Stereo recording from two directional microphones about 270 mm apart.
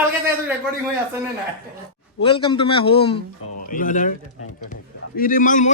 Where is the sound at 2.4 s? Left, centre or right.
Centre.